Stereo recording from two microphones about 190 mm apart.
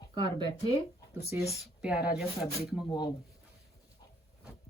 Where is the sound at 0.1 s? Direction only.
25° right (ahead or behind).